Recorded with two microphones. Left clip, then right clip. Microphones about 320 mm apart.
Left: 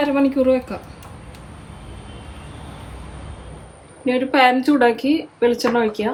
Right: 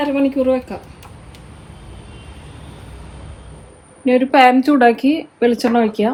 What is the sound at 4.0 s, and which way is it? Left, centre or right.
Speech, centre.